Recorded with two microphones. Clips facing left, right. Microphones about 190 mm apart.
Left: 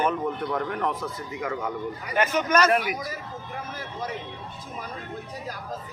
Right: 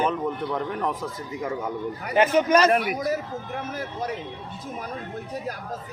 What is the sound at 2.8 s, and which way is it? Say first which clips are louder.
Speech: right 6 dB; 55° right (ahead or behind).